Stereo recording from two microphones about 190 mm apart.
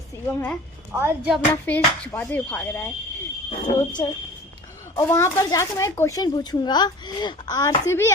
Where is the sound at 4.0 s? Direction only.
20° left (ahead or behind).